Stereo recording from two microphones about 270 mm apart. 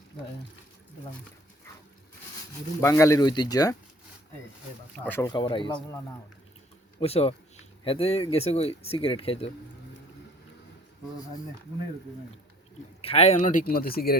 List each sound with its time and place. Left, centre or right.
2.8 s speech: centre
4.9 s speech: centre
7.0 s speech: left
13.0 s speech: left